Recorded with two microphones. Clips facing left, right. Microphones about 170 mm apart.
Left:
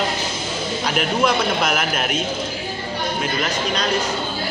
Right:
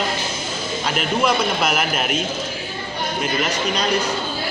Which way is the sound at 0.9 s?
5° right (ahead or behind).